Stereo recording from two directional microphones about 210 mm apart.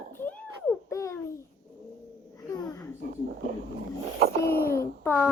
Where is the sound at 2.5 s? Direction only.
5° left (ahead or behind).